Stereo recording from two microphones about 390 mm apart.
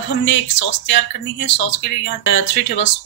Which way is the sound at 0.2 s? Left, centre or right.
Left.